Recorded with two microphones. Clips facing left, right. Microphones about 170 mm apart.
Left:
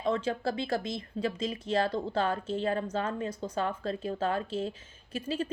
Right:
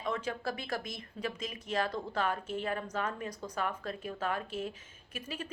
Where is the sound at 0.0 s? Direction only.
30° left (ahead or behind).